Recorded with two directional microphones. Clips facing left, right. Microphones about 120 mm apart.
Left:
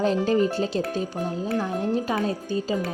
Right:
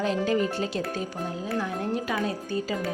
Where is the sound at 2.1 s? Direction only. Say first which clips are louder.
Left 3 dB; 25° left (ahead or behind).